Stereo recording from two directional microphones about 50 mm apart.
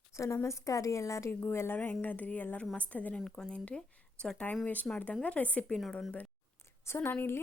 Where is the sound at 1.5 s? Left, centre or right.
Left.